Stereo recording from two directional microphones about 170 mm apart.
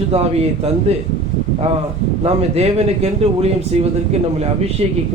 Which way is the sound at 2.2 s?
40° right (ahead or behind).